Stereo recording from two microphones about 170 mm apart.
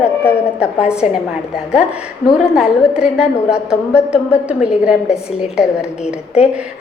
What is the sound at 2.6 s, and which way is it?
A woman's voice, 5° right (ahead or behind).